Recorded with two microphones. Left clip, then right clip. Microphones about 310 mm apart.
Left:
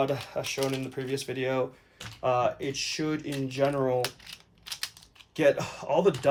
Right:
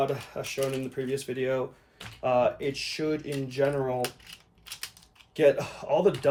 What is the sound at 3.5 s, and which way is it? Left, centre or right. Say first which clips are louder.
Coin: left 1 dB; left.